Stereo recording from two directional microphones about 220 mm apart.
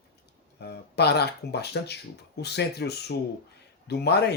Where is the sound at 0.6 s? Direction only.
50° left (ahead or behind).